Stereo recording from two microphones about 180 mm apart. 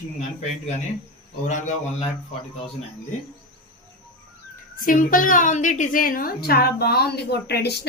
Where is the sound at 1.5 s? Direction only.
40° left (ahead or behind).